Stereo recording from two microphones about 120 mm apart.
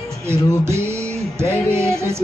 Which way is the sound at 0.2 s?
20° right (ahead or behind).